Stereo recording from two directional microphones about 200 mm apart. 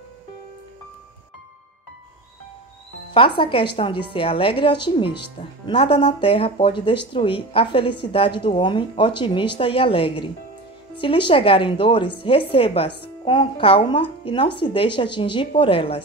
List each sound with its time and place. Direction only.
3.1 s speech: 25° left (ahead or behind)